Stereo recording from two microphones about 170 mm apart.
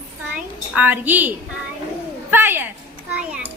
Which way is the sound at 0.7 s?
10° right (ahead or behind).